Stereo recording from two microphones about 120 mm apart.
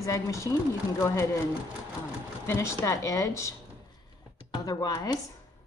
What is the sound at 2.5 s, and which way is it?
A woman's voice, 20° left (ahead or behind).